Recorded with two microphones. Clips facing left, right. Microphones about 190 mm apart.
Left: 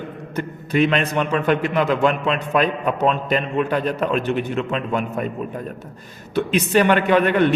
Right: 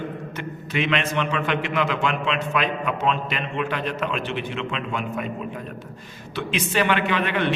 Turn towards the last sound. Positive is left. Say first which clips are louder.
# left 7 dB
turn(degrees=45)  # may be behind; listen again after turning